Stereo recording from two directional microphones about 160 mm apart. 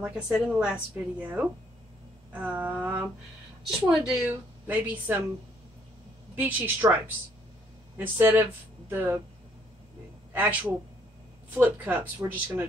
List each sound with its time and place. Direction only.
0.0 s a woman's voice: 10° right (ahead or behind)
6.3 s a woman's voice: 10° right (ahead or behind)
8.0 s a woman's voice: 15° right (ahead or behind)
10.3 s a woman's voice: 10° right (ahead or behind)